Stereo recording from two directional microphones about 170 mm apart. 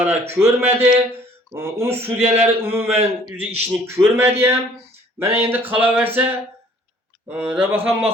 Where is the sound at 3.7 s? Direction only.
15° right (ahead or behind).